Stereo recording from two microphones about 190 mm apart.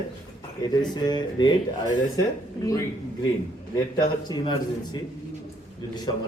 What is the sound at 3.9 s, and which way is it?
A man's voice, 25° left (ahead or behind).